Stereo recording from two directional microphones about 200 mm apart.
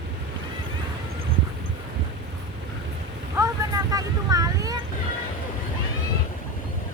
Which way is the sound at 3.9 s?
15° right (ahead or behind).